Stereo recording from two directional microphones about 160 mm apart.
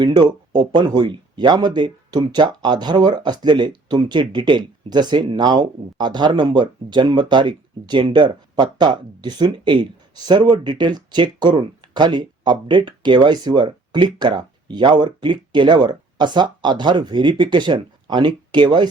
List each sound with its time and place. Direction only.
0.0 s speech: 25° right (ahead or behind)